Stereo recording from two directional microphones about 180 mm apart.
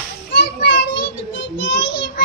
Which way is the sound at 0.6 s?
75° left (ahead or behind).